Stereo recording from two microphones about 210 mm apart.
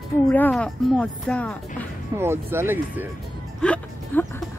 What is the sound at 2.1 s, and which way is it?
Speech, 10° right (ahead or behind).